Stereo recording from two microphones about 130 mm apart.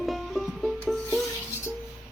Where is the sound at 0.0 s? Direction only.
Centre (ahead or behind).